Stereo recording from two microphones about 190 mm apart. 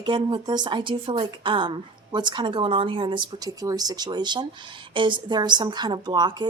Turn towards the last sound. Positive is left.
turn(degrees=-25)  # may be behind; listen again after turning